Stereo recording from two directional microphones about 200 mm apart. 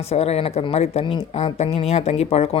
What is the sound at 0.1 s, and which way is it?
Speech, 30° left (ahead or behind).